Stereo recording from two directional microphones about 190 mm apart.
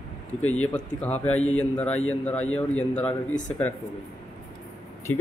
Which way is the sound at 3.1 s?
40° left (ahead or behind).